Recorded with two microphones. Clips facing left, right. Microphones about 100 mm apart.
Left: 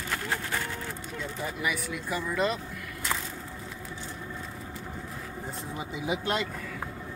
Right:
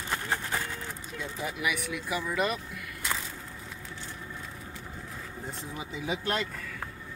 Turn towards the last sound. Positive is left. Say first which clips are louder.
# left 2 dB
turn(degrees=10)  # may be behind; listen again after turning